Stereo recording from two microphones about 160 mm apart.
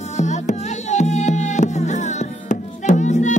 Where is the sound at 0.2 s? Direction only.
45° left (ahead or behind).